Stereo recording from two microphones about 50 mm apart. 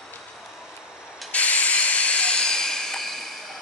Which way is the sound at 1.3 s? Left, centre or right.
Left.